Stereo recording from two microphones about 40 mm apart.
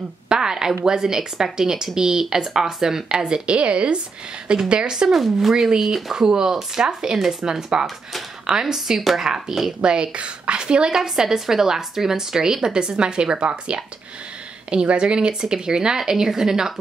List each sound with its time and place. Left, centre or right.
0.3 s a woman's voice: centre
5.0 s a woman's voice: centre
9.2 s a woman's voice: centre
11.0 s a woman's voice: centre